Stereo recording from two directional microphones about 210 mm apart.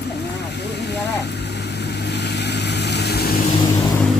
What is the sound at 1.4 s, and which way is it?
Vehicle, 55° left (ahead or behind).